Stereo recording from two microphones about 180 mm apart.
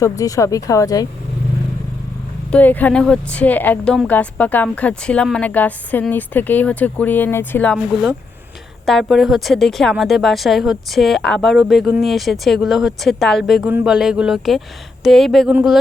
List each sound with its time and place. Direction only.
0.0 s speech: 20° left (ahead or behind)
2.5 s a woman's voice: 10° left (ahead or behind)